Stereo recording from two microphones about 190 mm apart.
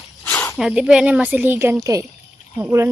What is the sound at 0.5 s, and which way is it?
A woman's voice, 5° right (ahead or behind).